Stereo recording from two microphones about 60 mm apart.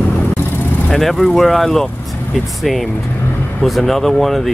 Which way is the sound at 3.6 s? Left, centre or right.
Centre.